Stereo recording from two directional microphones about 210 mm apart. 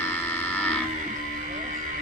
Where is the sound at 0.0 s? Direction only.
10° left (ahead or behind).